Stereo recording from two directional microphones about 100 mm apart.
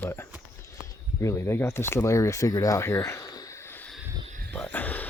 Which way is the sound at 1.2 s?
30° left (ahead or behind).